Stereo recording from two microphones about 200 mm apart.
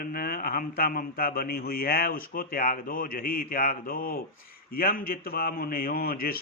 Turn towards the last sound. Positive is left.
turn(degrees=50)  # may be behind; listen again after turning